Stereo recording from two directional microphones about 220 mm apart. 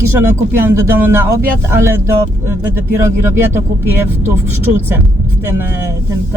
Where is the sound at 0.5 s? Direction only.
10° right (ahead or behind).